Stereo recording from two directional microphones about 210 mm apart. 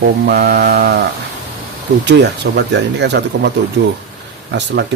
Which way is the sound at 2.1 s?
55° right (ahead or behind).